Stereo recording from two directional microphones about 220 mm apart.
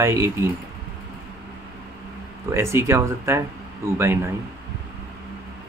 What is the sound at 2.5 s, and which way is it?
Speech, 10° right (ahead or behind).